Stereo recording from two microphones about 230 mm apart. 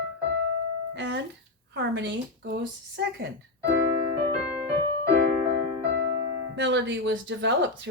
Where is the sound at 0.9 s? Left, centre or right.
Right.